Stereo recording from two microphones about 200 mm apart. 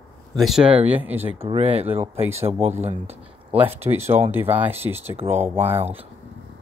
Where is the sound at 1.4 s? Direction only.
30° right (ahead or behind).